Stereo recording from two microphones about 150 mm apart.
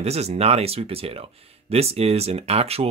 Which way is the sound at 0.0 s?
45° right (ahead or behind).